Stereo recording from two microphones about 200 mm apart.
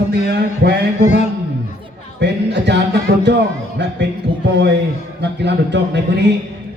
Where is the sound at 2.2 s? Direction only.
60° right (ahead or behind).